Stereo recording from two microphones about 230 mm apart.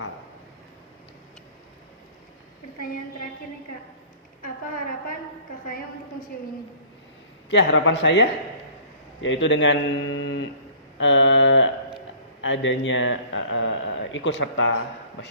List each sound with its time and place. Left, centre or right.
5.6 s a woman's voice: left
7.5 s speech: left
11.0 s a sound: left
12.4 s speech: left